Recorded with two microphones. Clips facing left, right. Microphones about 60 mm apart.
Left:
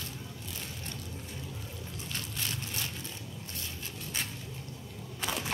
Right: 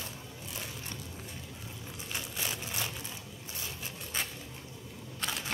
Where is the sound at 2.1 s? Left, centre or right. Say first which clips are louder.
Right 1 dB; centre.